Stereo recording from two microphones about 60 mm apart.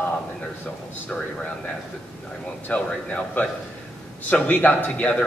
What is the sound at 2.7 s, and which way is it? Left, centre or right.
Speech, left.